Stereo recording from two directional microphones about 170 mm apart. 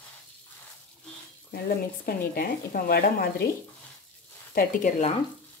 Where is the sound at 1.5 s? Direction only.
65° left (ahead or behind).